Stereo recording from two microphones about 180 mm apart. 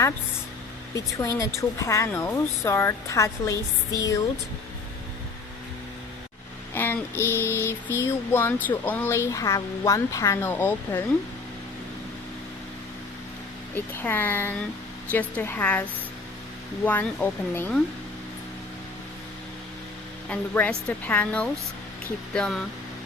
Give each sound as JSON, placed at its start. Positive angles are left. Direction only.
{"t": 0.9, "sound": "speech", "side_deg": 20}
{"t": 6.7, "sound": "a sound", "side_deg": 10}
{"t": 7.9, "sound": "speech", "side_deg": 15}
{"t": 13.7, "sound": "speech", "side_deg": 10}
{"t": 20.3, "sound": "speech", "side_deg": 10}